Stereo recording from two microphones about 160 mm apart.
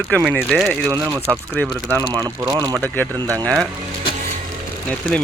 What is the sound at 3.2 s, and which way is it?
Speech, 25° right (ahead or behind).